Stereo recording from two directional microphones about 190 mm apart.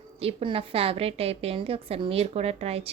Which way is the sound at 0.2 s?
30° right (ahead or behind).